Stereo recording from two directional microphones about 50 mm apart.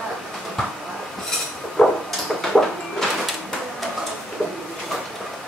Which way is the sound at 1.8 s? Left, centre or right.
Centre.